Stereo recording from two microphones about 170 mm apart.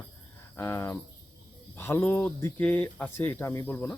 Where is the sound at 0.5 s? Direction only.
15° left (ahead or behind).